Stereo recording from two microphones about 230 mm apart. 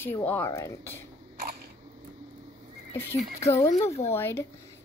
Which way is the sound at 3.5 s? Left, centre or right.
Left.